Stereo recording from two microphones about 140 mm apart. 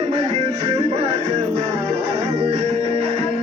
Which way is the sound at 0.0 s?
45° right (ahead or behind).